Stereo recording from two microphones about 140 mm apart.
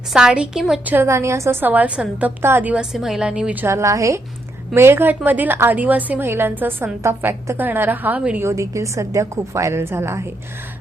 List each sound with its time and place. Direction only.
0.1 s a woman's voice: 5° right (ahead or behind)
0.9 s a woman's voice: 20° right (ahead or behind)